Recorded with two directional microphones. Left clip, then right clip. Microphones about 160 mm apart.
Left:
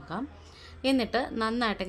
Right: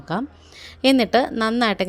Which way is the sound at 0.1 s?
45° right (ahead or behind).